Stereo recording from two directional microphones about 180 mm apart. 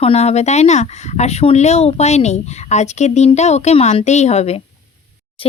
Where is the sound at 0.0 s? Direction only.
35° left (ahead or behind).